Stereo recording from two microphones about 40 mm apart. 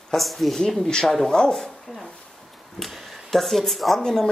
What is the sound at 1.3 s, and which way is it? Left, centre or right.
Speech, centre.